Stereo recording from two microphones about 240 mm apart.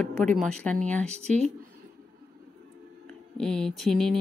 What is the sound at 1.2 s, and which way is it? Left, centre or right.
Speech, right.